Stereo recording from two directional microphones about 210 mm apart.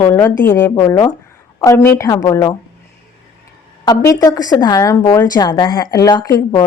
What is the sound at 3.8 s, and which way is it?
A woman's voice, 15° left (ahead or behind).